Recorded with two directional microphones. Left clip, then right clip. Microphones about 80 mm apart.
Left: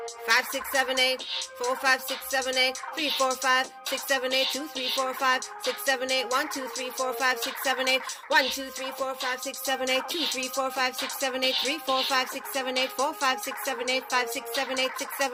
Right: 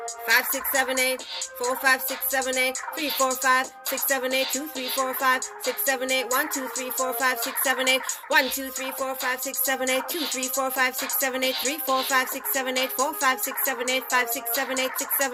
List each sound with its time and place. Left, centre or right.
0.3 s speech: left
10.1 s speech: right
10.6 s speech: left